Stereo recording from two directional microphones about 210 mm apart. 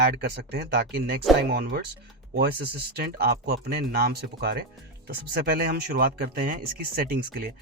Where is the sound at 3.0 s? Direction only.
50° right (ahead or behind).